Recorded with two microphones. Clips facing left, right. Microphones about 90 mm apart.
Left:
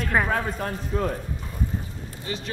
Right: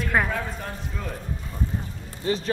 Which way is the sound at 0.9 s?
50° left (ahead or behind).